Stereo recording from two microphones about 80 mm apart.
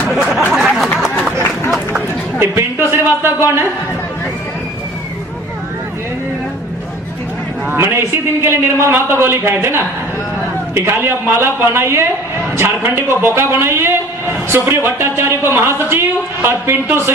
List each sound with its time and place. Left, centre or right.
0.1 s a sound: centre
2.4 s a man's voice: right
7.7 s a man's voice: right
10.8 s a man's voice: right